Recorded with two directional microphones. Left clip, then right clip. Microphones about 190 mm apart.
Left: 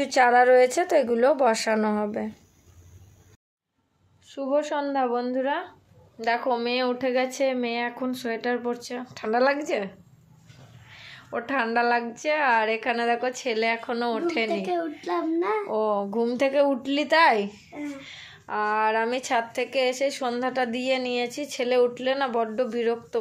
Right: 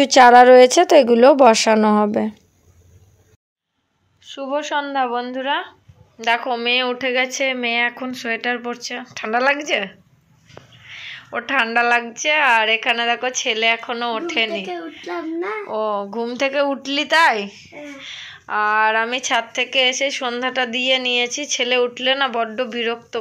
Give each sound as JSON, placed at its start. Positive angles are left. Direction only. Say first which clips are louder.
{"t": 0.0, "sound": "a woman's voice", "louder": "right 10 dB", "side_deg": -55}
{"t": 4.2, "sound": "a woman's voice", "louder": "right 2 dB", "side_deg": 5}
{"t": 10.9, "sound": "a sound", "louder": "right 11 dB", "side_deg": 5}
{"t": 11.3, "sound": "speech", "louder": "right 7 dB", "side_deg": 5}
{"t": 15.7, "sound": "speech", "louder": "right 3 dB", "side_deg": 10}